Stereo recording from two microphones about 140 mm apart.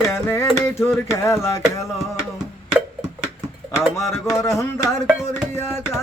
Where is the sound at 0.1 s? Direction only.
20° left (ahead or behind).